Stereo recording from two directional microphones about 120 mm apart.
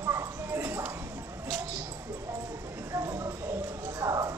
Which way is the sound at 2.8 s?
25° right (ahead or behind).